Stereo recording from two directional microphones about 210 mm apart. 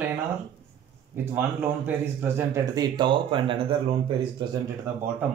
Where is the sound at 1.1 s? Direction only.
10° right (ahead or behind); by 3.6 s 25° right (ahead or behind).